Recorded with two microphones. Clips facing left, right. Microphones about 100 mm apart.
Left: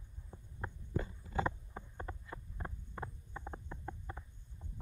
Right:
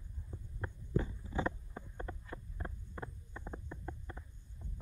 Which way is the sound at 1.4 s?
20° left (ahead or behind).